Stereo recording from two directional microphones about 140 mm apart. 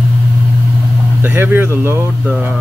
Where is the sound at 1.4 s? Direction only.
15° right (ahead or behind).